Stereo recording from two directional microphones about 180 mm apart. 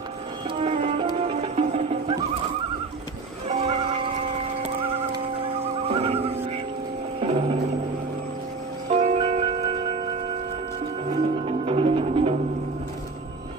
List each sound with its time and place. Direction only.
0.6 s music: 35° right (ahead or behind)
3.4 s music: 35° right (ahead or behind)
8.8 s music: 35° right (ahead or behind)
11.1 s music: 35° right (ahead or behind)